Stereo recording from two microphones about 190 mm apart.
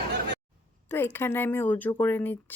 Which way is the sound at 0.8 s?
10° left (ahead or behind).